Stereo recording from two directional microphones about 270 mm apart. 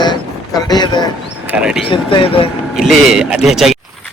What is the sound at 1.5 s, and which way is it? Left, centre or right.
Speech, centre.